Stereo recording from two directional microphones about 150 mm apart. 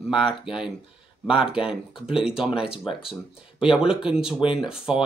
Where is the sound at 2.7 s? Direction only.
35° left (ahead or behind).